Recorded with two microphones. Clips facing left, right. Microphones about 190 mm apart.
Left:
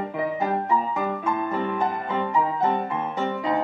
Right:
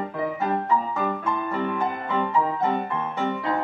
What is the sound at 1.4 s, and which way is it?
Music, 15° left (ahead or behind).